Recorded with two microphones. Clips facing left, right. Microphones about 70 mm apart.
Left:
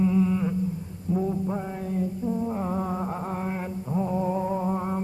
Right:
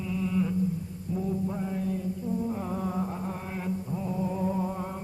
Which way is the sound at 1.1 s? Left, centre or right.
Left.